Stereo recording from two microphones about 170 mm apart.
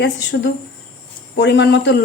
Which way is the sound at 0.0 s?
90° left.